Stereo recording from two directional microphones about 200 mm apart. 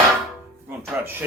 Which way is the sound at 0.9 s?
10° right (ahead or behind).